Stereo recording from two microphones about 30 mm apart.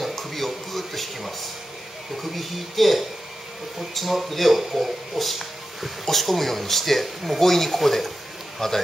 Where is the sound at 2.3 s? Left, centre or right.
Centre.